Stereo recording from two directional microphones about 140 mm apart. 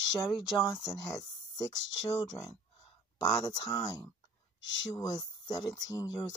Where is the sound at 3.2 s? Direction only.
25° left (ahead or behind).